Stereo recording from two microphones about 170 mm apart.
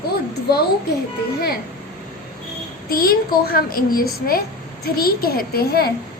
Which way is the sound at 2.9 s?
60° left (ahead or behind).